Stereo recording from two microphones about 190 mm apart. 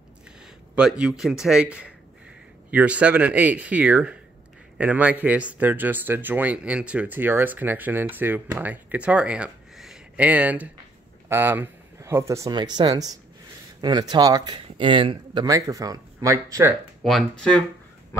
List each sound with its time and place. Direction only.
0.7 s speech: 5° right (ahead or behind)
17.0 s speech: 5° left (ahead or behind)